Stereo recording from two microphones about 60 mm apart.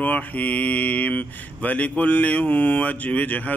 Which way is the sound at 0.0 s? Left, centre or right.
Left.